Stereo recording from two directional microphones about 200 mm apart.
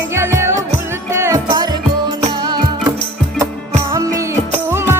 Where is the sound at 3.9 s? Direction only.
15° right (ahead or behind).